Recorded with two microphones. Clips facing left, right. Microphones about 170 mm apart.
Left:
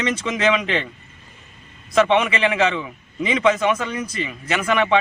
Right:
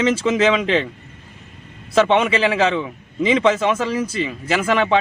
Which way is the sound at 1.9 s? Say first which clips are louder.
Right 2 dB; 30° right (ahead or behind).